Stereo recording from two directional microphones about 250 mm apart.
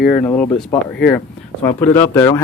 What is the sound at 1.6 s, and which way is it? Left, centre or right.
Speech, centre.